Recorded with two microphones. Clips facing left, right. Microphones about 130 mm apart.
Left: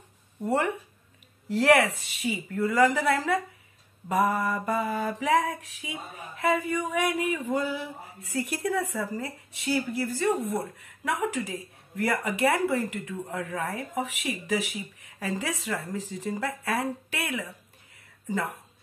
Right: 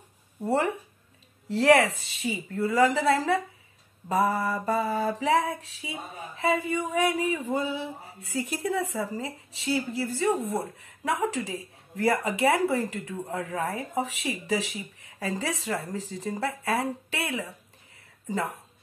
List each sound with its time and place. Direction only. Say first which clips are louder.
0.5 s speech: right 1 dB; 30° right (ahead or behind)
5.2 s a sound: left 3 dB; 30° right (ahead or behind)
10.4 s speech: even; 30° right (ahead or behind)